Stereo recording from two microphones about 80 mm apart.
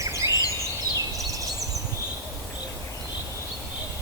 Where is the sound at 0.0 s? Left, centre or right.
Right.